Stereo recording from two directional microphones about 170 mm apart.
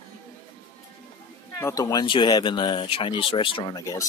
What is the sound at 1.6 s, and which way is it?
Speech, 20° left (ahead or behind).